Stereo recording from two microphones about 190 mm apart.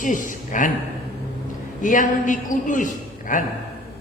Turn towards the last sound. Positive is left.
turn(degrees=45)  # may be behind; listen again after turning